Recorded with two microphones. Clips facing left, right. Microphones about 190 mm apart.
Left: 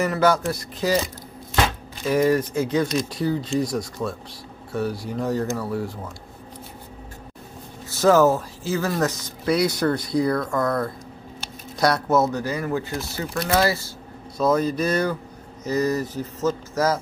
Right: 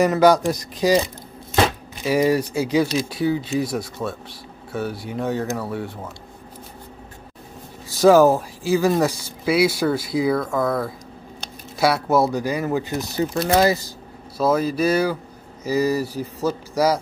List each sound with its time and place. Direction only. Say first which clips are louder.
0.0 s speech: right 5 dB; 15° right (ahead or behind)
2.0 s speech: right 1 dB; 10° right (ahead or behind)
7.9 s speech: right 3 dB; 10° right (ahead or behind)
14.4 s speech: right 1 dB; 5° right (ahead or behind)